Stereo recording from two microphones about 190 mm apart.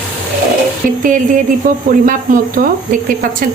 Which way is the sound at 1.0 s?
45° right (ahead or behind).